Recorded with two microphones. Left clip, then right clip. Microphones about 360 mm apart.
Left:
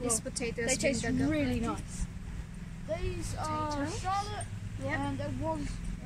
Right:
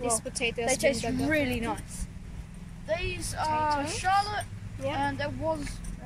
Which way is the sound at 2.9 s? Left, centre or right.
Right.